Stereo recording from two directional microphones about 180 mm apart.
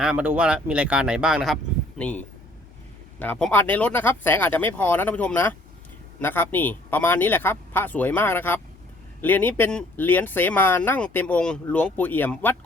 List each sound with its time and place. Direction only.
0.0 s speech: 5° right (ahead or behind)
2.0 s speech: 5° left (ahead or behind)